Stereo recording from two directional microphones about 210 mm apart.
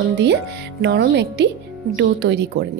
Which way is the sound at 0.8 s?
55° right (ahead or behind).